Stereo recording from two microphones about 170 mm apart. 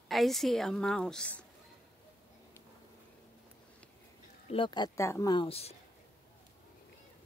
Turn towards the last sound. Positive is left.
turn(degrees=35)  # may be behind; listen again after turning